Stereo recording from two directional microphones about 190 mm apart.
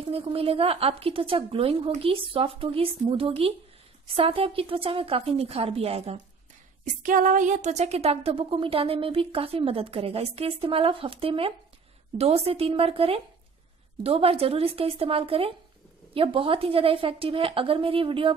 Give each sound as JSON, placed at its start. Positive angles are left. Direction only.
{"t": 0.0, "sound": "a woman's voice", "side_deg": -30}
{"t": 6.8, "sound": "a woman's voice", "side_deg": -45}